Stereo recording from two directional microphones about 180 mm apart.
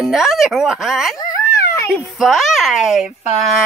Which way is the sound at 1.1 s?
15° left (ahead or behind).